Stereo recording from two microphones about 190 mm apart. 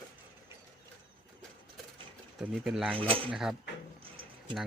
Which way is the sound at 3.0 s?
30° right (ahead or behind).